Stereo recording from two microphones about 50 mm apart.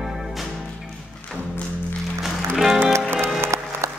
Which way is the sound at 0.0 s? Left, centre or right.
Centre.